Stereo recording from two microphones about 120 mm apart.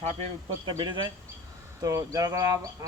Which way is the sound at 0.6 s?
40° right (ahead or behind).